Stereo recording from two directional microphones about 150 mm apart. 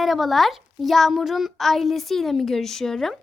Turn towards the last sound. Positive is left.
turn(degrees=0)  # may be behind; listen again after turning